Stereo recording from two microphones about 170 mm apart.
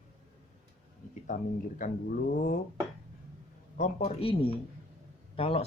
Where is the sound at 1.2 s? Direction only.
50° left (ahead or behind).